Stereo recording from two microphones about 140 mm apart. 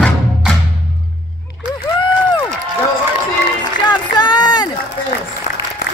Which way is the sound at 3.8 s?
30° left (ahead or behind).